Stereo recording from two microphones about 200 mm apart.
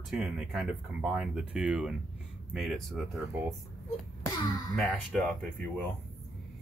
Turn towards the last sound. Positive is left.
turn(degrees=5)  # may be behind; listen again after turning